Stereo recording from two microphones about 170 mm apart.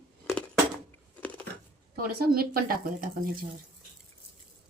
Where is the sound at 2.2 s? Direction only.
60° right (ahead or behind).